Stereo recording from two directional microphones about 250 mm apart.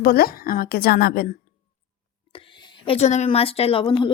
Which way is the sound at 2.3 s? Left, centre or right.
Left.